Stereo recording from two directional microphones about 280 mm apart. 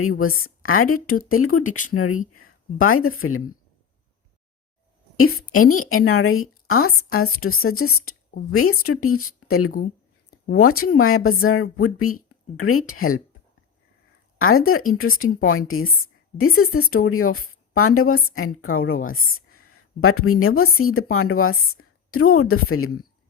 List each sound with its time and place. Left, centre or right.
0.0 s a woman's voice: left
1.6 s speech: left
1.9 s a woman's voice: left
5.1 s a woman's voice: left
14.3 s a woman's voice: left